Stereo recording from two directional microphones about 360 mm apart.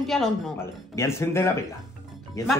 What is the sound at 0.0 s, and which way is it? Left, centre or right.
A woman's voice, centre.